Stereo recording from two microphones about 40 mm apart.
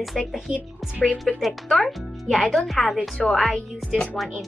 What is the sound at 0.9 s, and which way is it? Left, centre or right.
Speech, right.